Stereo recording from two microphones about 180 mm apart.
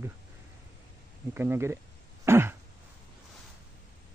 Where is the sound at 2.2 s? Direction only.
15° right (ahead or behind).